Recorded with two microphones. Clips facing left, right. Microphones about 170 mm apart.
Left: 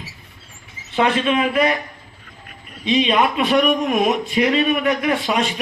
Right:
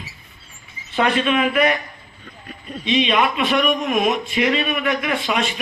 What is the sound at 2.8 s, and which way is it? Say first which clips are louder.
Speech: left 1 dB; 35° left (ahead or behind).